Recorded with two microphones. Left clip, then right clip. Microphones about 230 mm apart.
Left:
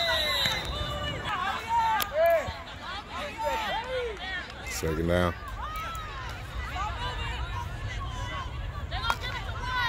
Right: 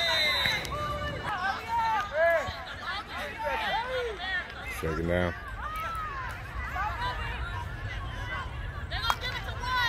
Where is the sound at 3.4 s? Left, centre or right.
Left.